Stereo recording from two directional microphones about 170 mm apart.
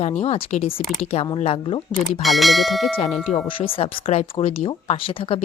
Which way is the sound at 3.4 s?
30° left (ahead or behind).